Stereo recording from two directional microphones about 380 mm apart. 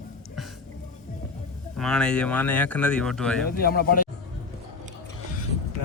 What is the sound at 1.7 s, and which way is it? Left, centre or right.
Speech, centre.